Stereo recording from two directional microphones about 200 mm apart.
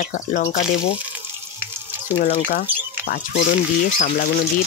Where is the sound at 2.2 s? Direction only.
40° left (ahead or behind).